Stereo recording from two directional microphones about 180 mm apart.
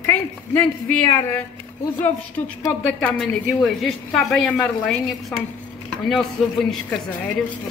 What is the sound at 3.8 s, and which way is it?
A woman's voice, centre (ahead or behind).